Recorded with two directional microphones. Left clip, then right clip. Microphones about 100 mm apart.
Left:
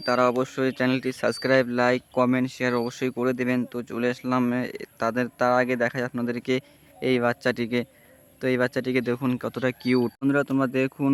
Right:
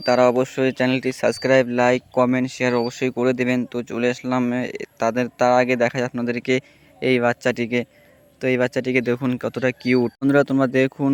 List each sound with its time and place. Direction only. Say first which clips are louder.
0.0 s speech: right 6 dB; 30° right (ahead or behind)
10.2 s speech: right 6 dB; 35° right (ahead or behind)